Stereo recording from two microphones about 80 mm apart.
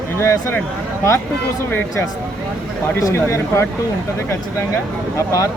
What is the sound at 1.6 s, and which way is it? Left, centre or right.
Speech, left.